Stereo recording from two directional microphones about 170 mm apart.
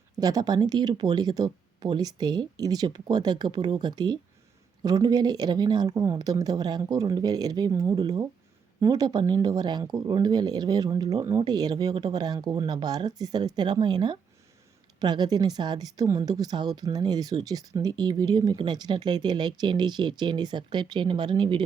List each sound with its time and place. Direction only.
0.2 s speech: 20° right (ahead or behind)